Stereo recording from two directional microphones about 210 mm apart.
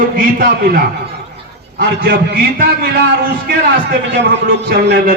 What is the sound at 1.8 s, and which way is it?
A man's voice, 45° right (ahead or behind).